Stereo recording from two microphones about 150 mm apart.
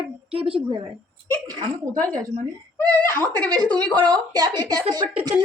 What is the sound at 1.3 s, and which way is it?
Speech, 25° right (ahead or behind).